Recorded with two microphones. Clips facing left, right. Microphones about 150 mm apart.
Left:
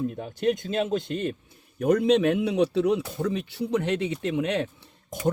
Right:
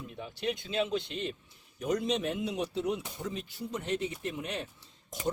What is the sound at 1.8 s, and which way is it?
A man's voice, 60° left (ahead or behind).